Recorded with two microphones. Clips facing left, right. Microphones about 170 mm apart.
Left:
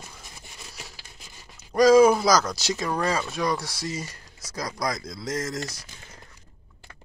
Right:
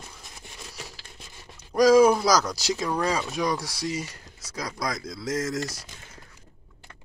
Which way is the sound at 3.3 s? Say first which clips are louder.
Even; 15° right (ahead or behind).